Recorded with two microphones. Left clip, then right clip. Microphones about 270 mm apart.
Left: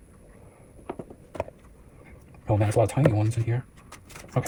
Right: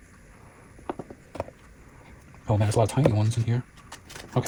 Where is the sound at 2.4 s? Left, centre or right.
Right.